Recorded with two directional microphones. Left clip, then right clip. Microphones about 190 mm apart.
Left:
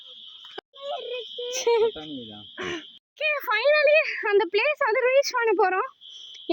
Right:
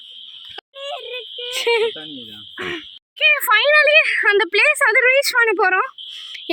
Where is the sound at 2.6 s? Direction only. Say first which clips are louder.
Right 5 dB; 45° right (ahead or behind).